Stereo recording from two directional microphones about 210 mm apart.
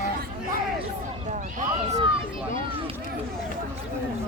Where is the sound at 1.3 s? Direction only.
35° right (ahead or behind).